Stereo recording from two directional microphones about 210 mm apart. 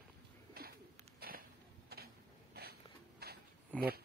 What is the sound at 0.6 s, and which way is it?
Bird, 45° right (ahead or behind).